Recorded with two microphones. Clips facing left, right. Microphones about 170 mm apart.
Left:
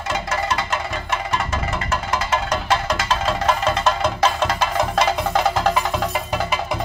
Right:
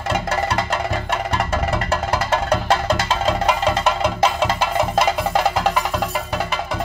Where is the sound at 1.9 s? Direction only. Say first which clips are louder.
Even; 30° right (ahead or behind).